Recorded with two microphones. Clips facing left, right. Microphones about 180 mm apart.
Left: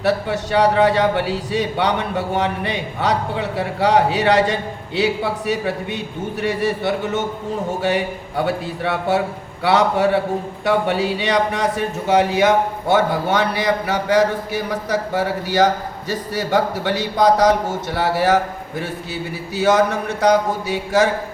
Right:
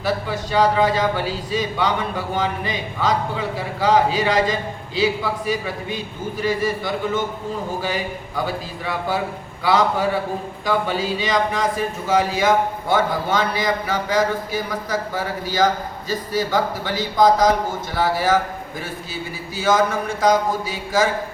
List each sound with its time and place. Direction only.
0.0 s a man's voice: 70° left (ahead or behind)